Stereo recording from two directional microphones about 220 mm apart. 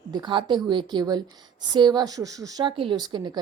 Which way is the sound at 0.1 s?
20° right (ahead or behind).